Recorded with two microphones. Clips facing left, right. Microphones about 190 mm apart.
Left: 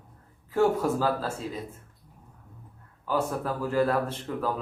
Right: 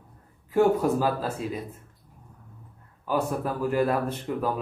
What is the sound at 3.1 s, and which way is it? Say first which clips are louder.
A man's voice: right 1 dB; 15° right (ahead or behind).